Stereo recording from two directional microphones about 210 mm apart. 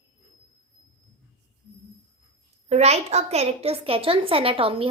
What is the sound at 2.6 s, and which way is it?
A woman's voice, 30° right (ahead or behind).